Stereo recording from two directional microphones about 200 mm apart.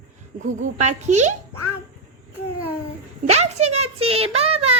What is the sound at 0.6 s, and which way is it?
Speech, 35° right (ahead or behind).